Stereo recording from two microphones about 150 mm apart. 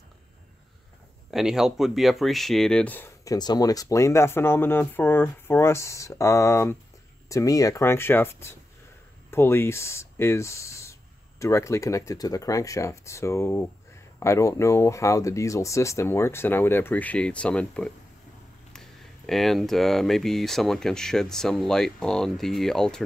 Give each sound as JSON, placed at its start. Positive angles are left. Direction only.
{"t": 1.3, "sound": "speech", "side_deg": -5}
{"t": 3.3, "sound": "speech", "side_deg": 25}